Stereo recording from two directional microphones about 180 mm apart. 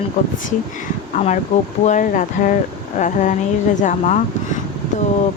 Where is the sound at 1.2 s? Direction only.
45° left (ahead or behind).